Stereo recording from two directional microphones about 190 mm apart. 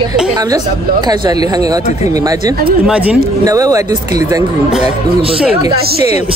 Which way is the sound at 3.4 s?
20° right (ahead or behind).